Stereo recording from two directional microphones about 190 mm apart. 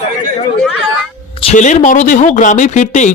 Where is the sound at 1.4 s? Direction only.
40° left (ahead or behind).